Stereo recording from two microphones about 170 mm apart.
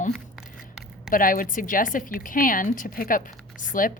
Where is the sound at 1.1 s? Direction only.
55° left (ahead or behind).